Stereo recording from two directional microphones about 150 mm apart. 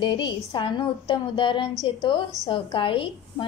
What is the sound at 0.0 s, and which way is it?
Speech, 30° left (ahead or behind).